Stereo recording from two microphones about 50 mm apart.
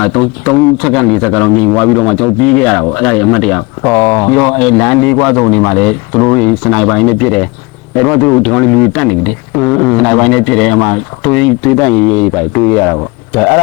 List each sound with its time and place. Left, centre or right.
0.0 s a man's voice: centre
8.2 s a man's voice: centre